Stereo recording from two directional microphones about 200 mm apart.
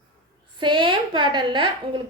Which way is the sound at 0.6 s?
25° right (ahead or behind).